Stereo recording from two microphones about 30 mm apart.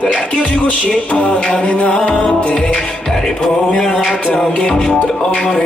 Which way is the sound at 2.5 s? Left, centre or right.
Left.